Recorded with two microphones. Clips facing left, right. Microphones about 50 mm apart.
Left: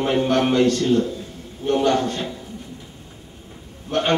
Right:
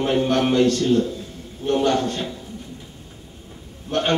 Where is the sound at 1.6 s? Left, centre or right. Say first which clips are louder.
Left 1 dB; left.